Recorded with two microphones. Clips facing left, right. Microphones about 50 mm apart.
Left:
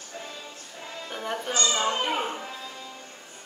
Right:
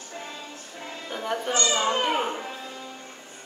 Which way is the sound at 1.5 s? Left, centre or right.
Right.